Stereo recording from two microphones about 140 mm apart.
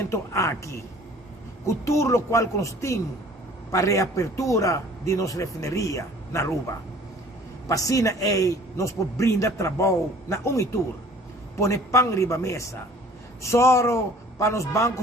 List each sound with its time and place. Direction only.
0.0 s a man's voice: 20° left (ahead or behind)